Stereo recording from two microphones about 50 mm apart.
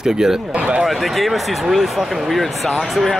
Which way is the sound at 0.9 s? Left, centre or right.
Centre.